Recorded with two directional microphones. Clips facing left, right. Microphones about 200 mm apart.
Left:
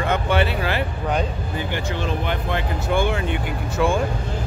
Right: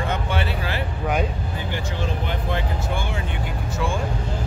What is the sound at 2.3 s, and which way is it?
Speech, 65° left (ahead or behind).